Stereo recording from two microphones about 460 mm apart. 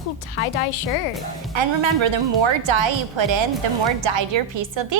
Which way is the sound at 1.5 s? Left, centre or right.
Right.